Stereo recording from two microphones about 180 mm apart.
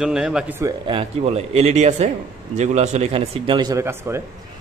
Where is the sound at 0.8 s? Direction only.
30° right (ahead or behind).